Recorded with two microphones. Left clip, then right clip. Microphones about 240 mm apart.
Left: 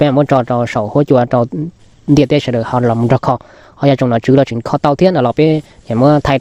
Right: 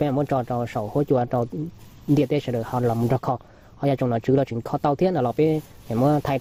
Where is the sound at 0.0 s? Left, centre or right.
Left.